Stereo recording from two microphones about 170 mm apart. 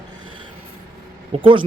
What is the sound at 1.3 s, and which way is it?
Speech, 35° right (ahead or behind).